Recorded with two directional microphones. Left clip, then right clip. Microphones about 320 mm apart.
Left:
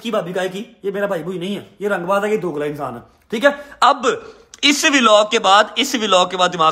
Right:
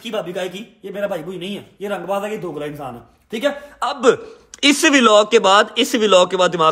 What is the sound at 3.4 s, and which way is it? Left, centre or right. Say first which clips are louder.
Speech: left 7 dB; left.